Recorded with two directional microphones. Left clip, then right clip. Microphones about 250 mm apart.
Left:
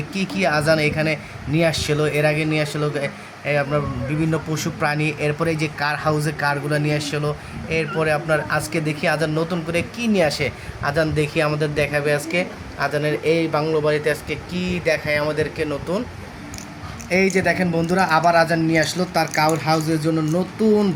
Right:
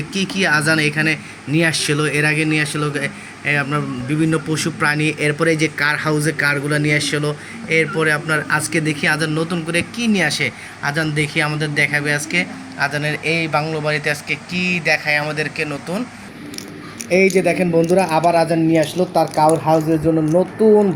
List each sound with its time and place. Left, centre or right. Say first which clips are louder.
0.1 s speech: right 4 dB; centre
17.2 s speech: right 4 dB; centre